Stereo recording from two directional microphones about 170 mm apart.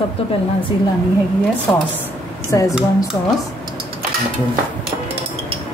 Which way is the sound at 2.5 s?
20° left (ahead or behind).